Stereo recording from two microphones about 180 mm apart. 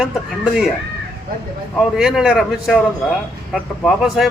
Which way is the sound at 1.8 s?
5° right (ahead or behind).